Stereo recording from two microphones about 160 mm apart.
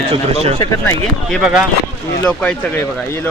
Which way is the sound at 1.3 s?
5° right (ahead or behind).